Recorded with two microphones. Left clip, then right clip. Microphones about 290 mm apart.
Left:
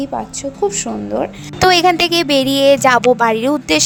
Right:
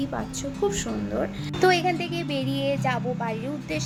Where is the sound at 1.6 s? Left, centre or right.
Left.